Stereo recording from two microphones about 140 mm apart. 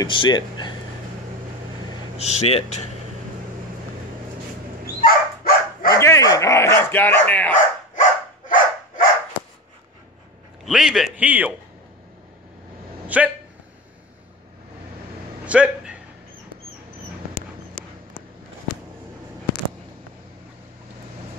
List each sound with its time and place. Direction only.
0.0 s speech: 35° left (ahead or behind)
2.1 s speech: 50° left (ahead or behind)
5.0 s dog: 90° left
5.9 s dog: 20° left (ahead or behind)
7.5 s dog: 65° left (ahead or behind)
10.6 s a man's voice: 5° right (ahead or behind)
13.0 s a sound: 10° right (ahead or behind)
15.4 s a sound: 10° right (ahead or behind)
17.3 s dog: 90° left